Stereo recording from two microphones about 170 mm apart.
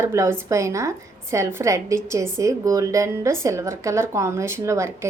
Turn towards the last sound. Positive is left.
turn(degrees=-15)  # may be behind; listen again after turning